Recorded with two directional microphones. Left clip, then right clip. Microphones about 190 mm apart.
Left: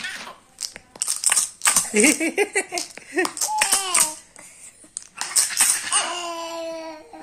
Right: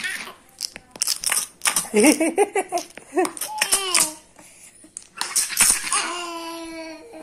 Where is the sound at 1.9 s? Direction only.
20° left (ahead or behind).